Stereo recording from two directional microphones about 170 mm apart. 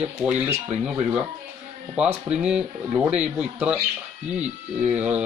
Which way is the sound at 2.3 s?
5° right (ahead or behind).